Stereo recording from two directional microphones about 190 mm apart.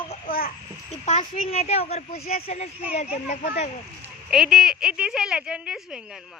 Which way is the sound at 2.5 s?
35° left (ahead or behind).